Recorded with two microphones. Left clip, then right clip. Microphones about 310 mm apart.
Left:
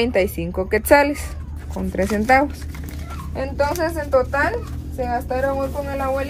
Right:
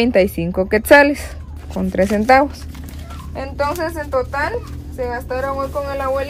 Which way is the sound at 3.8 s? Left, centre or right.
Centre.